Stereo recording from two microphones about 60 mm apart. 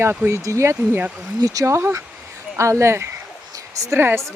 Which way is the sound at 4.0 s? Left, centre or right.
Right.